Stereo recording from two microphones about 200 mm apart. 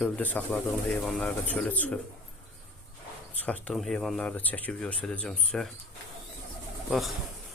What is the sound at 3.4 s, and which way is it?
Speech, 5° left (ahead or behind).